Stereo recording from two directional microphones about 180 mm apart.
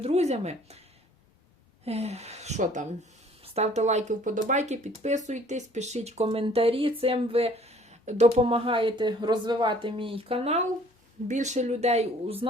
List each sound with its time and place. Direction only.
0.0 s speech: 35° right (ahead or behind)
1.8 s speech: 35° right (ahead or behind)